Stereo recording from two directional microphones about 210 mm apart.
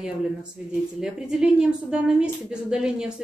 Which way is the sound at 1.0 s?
5° right (ahead or behind).